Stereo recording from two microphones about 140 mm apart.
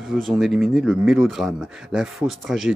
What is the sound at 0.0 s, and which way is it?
Speech, centre (ahead or behind).